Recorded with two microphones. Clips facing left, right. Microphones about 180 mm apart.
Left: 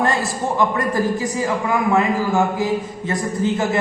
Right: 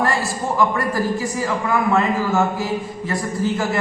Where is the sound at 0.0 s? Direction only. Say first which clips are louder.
Left 1 dB; 20° left (ahead or behind).